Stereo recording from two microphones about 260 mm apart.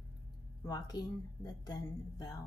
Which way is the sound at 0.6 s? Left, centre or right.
Centre.